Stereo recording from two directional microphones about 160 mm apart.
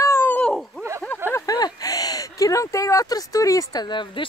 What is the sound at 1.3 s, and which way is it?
Speech, 25° left (ahead or behind).